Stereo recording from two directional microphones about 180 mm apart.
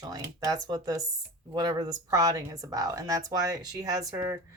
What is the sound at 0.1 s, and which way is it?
Speech, 20° right (ahead or behind).